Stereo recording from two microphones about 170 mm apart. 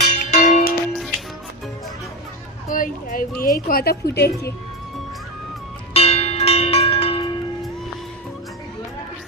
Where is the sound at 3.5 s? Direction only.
60° left (ahead or behind).